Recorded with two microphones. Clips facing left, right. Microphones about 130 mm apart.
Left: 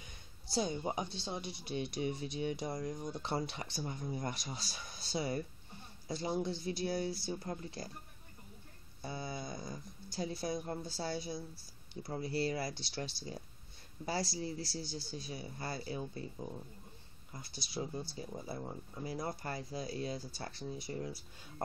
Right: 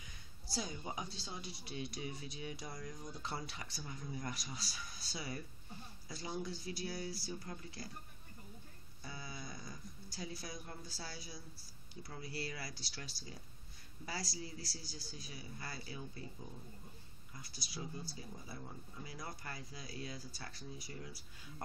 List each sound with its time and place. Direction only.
0.0 s speech: 25° left (ahead or behind)
9.0 s speech: 30° left (ahead or behind)